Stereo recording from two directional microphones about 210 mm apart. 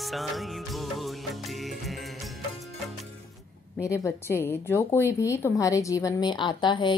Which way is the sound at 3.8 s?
15° left (ahead or behind).